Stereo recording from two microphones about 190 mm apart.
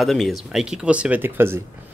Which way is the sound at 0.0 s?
Centre (ahead or behind).